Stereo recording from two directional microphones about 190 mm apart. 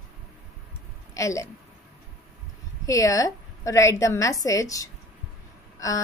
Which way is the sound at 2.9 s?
15° left (ahead or behind).